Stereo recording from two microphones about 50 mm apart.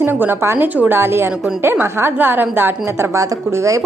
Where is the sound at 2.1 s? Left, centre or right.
Right.